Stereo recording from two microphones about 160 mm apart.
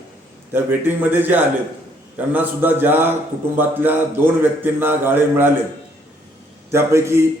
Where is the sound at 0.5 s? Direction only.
10° right (ahead or behind).